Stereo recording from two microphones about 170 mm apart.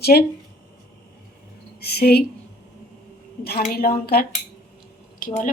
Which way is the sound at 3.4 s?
60° left (ahead or behind).